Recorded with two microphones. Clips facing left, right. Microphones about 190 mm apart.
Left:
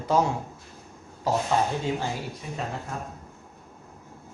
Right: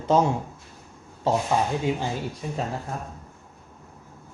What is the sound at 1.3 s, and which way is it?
Speech, 25° right (ahead or behind).